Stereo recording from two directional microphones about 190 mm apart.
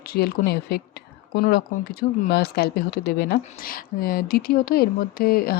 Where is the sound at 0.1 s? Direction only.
55° left (ahead or behind).